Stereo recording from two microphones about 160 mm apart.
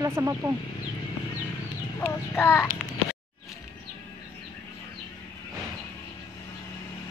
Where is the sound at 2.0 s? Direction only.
15° left (ahead or behind).